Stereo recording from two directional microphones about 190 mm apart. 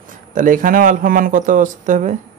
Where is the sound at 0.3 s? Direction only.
45° right (ahead or behind).